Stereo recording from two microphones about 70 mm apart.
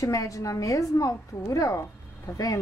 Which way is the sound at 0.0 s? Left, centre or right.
Left.